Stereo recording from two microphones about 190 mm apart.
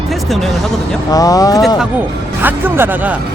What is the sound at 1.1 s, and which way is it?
Speech, 20° left (ahead or behind).